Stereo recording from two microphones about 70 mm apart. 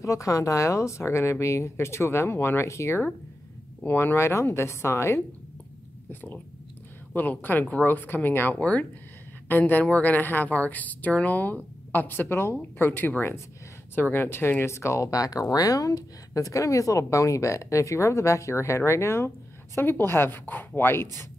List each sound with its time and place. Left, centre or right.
0.0 s speech: left
7.2 s a woman's voice: left